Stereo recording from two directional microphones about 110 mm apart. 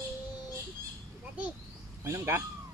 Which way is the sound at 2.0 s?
25° right (ahead or behind).